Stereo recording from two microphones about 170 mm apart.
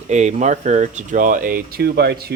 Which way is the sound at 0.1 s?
45° right (ahead or behind).